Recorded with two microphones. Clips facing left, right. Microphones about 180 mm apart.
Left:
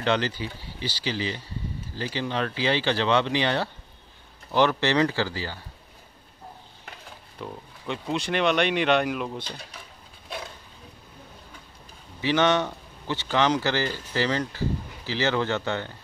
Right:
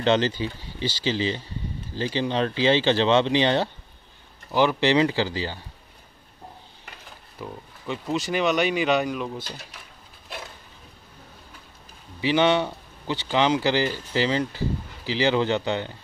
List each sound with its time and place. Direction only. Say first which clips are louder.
0.0 s speech: right 4 dB; 25° right (ahead or behind)
4.5 s speech: right 2 dB; 10° right (ahead or behind)
7.3 s speech: right 1 dB; centre (ahead or behind)
12.2 s speech: right 2 dB; 15° right (ahead or behind)